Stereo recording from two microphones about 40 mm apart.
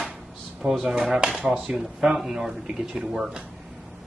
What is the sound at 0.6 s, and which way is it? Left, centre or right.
Speech, right.